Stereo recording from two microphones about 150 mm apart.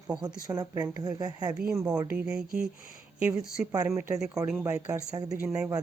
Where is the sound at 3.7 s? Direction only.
20° right (ahead or behind).